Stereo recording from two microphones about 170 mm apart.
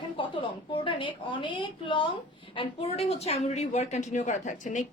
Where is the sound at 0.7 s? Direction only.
30° left (ahead or behind).